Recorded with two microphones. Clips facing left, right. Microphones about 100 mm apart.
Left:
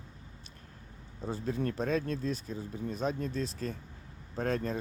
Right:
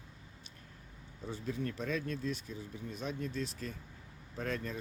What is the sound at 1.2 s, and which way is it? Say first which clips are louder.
Speech: left 5 dB; 40° left (ahead or behind).